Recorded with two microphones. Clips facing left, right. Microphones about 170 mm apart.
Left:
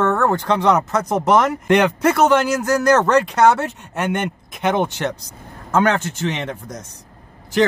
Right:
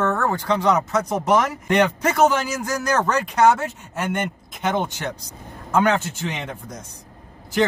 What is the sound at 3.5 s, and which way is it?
Speech, 65° left (ahead or behind).